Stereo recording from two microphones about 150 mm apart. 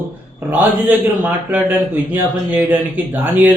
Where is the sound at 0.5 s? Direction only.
10° right (ahead or behind).